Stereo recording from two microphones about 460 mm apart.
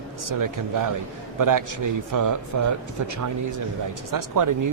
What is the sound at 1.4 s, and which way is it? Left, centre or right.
A man's voice, right.